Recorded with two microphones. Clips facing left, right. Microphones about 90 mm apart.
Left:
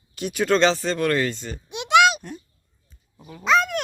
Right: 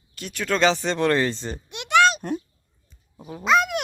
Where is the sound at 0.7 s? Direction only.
20° right (ahead or behind).